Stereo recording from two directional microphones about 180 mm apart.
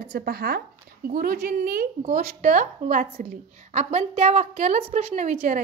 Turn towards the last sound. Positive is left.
turn(degrees=-35)  # may be behind; listen again after turning